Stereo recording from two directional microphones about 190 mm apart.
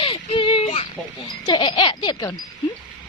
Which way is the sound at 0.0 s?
25° left (ahead or behind).